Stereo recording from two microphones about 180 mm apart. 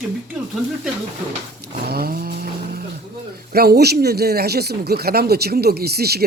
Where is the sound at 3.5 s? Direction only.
60° right (ahead or behind).